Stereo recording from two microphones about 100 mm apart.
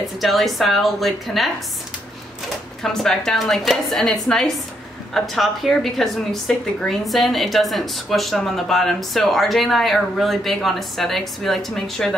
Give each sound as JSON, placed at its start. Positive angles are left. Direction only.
{"t": 0.2, "sound": "a woman's voice", "side_deg": 0}
{"t": 2.8, "sound": "a woman's voice", "side_deg": 5}